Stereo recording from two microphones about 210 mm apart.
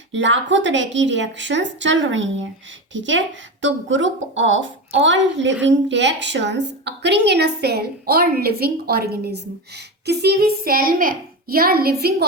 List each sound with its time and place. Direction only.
0.1 s a woman's voice: 60° right (ahead or behind); by 12.1 s 45° right (ahead or behind)